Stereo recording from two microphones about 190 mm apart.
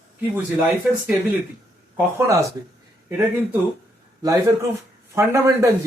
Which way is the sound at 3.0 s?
10° right (ahead or behind).